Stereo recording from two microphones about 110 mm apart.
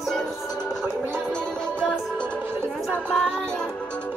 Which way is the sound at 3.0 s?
10° left (ahead or behind).